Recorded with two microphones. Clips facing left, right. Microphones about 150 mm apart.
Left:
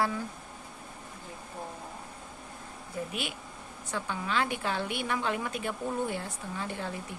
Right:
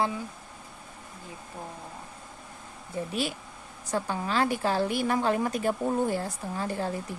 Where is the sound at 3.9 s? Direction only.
40° right (ahead or behind).